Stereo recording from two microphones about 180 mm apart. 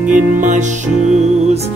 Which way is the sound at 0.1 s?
45° right (ahead or behind).